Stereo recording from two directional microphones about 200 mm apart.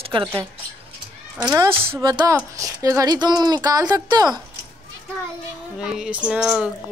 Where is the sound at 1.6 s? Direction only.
25° right (ahead or behind).